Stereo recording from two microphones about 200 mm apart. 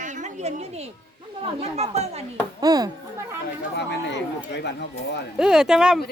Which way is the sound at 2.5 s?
20° right (ahead or behind).